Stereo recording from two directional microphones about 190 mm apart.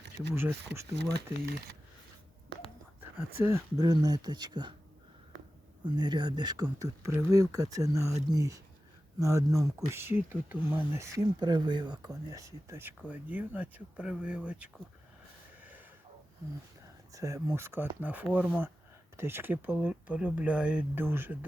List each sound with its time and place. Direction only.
0.3 s speech: 15° right (ahead or behind)
0.9 s speech: 60° right (ahead or behind)
3.0 s speech: 10° right (ahead or behind)
5.8 s speech: 20° right (ahead or behind); by 14.7 s 5° right (ahead or behind)
15.6 s a sound: 10° right (ahead or behind)
17.1 s speech: 15° right (ahead or behind)